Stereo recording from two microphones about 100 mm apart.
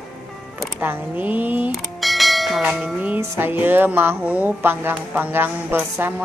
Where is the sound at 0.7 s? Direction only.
20° right (ahead or behind).